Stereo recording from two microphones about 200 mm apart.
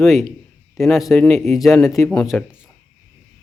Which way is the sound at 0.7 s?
Centre (ahead or behind).